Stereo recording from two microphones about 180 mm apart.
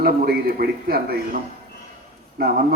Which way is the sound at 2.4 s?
60° right (ahead or behind).